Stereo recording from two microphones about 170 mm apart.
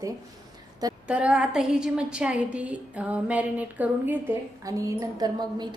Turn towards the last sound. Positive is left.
turn(degrees=-25)  # may be behind; listen again after turning